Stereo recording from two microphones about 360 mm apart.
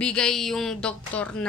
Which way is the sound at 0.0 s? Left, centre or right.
Centre.